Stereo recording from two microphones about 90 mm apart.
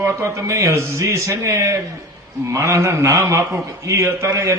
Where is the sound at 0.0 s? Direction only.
30° right (ahead or behind).